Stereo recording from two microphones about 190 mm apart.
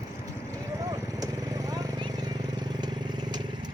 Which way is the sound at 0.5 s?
15° right (ahead or behind).